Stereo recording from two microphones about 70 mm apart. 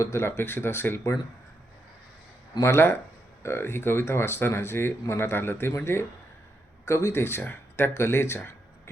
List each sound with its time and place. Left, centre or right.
0.0 s speech: left
2.6 s speech: left